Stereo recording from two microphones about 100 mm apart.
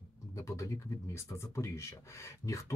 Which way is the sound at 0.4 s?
35° left (ahead or behind).